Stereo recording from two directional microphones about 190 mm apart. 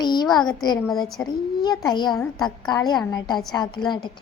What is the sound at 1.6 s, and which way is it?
A woman's voice, 20° left (ahead or behind).